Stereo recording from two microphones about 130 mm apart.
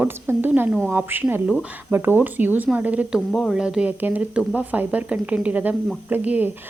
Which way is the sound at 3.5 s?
5° right (ahead or behind).